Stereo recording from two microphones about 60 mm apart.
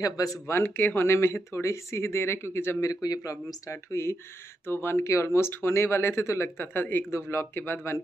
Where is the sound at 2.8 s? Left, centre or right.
Left.